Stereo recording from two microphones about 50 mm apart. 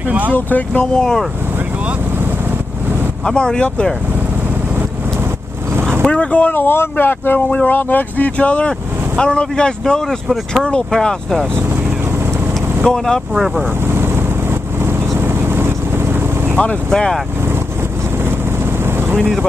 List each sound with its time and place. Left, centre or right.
0.3 s speech: left
0.9 s speech: centre
3.3 s speech: centre
5.8 s boat: right
6.0 s speech: left
6.5 s speech: left
7.3 s speech: left; by 11.4 s centre
12.8 s speech: centre
13.8 s vehicle: right
16.9 s speech: centre
18.6 s vehicle: right